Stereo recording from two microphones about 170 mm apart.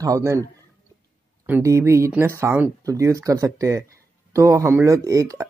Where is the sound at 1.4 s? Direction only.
15° right (ahead or behind).